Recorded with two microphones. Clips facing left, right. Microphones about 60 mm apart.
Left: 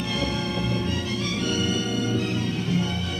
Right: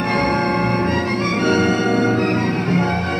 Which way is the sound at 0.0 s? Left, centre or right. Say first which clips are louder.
Right 10 dB; right.